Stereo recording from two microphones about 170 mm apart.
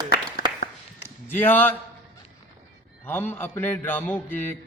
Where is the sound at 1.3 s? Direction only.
10° left (ahead or behind).